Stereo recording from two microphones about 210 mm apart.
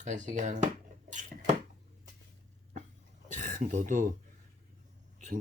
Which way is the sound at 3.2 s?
35° right (ahead or behind).